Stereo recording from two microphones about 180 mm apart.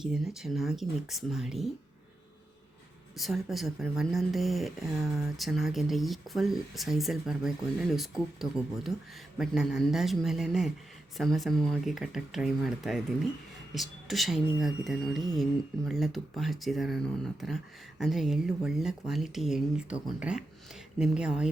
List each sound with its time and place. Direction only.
0.0 s speech: centre (ahead or behind)
3.2 s speech: centre (ahead or behind)